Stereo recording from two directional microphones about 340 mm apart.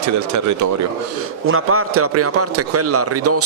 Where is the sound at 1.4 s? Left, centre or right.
Right.